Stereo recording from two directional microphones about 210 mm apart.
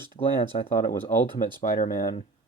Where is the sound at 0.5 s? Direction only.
40° left (ahead or behind).